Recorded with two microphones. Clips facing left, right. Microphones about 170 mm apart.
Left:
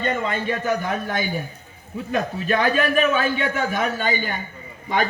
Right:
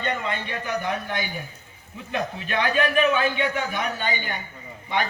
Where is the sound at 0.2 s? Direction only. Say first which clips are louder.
Left 5 dB; 45° left (ahead or behind).